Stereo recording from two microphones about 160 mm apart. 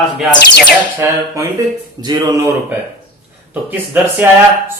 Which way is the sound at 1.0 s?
15° right (ahead or behind).